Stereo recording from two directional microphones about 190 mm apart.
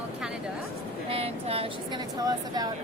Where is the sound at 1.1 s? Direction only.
30° right (ahead or behind).